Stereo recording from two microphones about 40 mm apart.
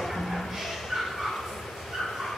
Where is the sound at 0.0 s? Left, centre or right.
Centre.